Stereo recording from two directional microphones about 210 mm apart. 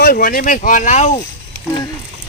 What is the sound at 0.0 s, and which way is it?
Speech, 45° left (ahead or behind).